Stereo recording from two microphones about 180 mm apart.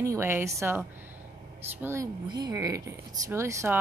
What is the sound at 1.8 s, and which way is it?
A woman's voice, 15° right (ahead or behind).